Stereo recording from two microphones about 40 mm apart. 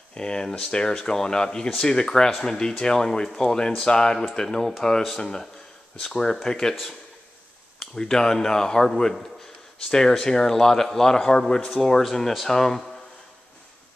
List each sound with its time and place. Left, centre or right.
0.1 s speech: centre
7.8 s speech: centre
11.6 s speech: centre